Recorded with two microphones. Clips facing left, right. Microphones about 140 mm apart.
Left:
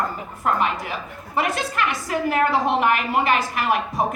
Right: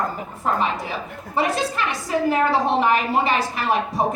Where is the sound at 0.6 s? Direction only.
30° right (ahead or behind).